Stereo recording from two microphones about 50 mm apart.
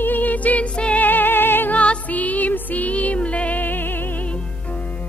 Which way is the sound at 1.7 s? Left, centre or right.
Left.